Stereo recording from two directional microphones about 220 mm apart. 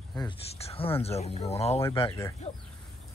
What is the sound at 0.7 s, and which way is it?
Speech, 25° left (ahead or behind).